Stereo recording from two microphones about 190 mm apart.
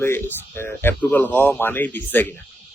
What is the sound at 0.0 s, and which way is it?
A man's voice, 10° left (ahead or behind).